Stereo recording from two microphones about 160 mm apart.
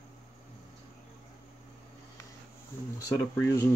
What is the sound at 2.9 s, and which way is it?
Speech, 15° left (ahead or behind).